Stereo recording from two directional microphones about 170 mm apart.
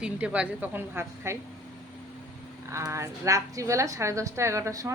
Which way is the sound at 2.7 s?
15° right (ahead or behind).